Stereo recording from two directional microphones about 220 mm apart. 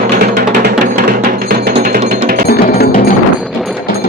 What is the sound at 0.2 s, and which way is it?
Music, 50° right (ahead or behind).